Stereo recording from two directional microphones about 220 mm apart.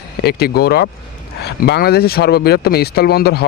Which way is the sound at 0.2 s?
45° left (ahead or behind).